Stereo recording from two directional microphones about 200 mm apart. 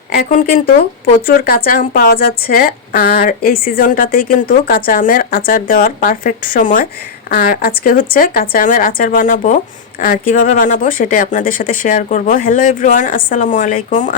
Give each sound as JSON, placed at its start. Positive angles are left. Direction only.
{"t": 0.1, "sound": "a woman's voice", "side_deg": 45}